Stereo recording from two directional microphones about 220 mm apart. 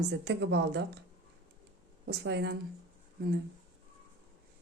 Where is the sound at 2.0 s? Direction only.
50° right (ahead or behind).